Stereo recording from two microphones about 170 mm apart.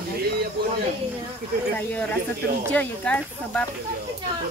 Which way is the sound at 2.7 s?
10° left (ahead or behind).